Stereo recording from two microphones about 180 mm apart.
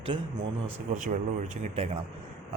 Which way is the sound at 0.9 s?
45° right (ahead or behind).